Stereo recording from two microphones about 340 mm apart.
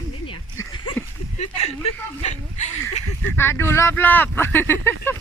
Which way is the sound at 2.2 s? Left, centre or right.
Centre.